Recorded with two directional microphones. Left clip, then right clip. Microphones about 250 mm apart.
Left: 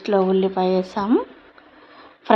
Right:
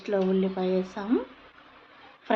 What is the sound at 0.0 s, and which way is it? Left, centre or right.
Speech, left.